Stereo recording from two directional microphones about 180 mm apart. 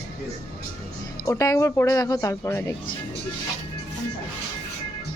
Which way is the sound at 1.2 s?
20° left (ahead or behind).